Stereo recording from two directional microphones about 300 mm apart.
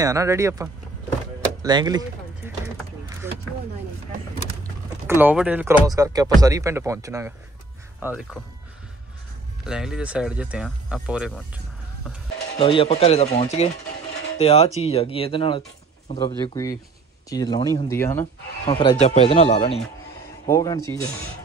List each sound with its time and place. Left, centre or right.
0.0 s speech: centre
5.0 s speech: centre
9.7 s speech: centre
12.5 s speech: centre